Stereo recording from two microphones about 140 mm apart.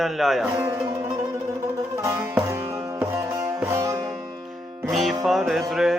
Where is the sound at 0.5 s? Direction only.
15° right (ahead or behind).